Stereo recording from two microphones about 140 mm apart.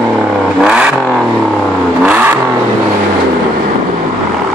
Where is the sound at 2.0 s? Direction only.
15° right (ahead or behind).